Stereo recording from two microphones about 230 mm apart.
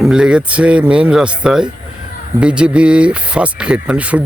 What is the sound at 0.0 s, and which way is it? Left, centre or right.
Speech, centre.